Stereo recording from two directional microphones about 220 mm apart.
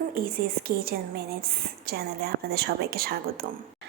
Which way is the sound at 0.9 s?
45° right (ahead or behind).